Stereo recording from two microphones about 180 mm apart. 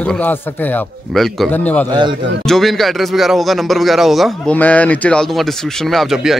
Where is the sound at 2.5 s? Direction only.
Centre (ahead or behind).